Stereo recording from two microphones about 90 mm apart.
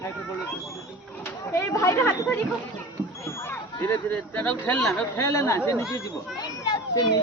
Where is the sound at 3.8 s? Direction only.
20° left (ahead or behind).